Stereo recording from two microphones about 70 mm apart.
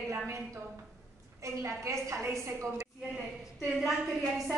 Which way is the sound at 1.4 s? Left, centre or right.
Right.